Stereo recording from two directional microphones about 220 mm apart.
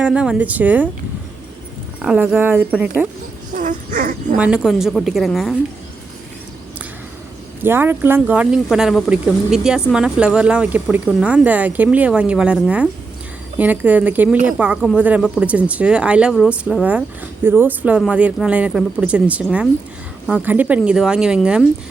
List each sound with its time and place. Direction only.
0.0 s speech: 5° right (ahead or behind)
2.0 s speech: 5° right (ahead or behind)
3.5 s speech: 35° right (ahead or behind)
4.4 s speech: 5° right (ahead or behind)
7.6 s speech: 10° right (ahead or behind)